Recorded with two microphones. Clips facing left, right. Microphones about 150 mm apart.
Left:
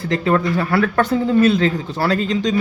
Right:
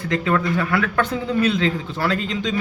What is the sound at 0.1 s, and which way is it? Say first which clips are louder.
Speech: left 3 dB; 35° left (ahead or behind).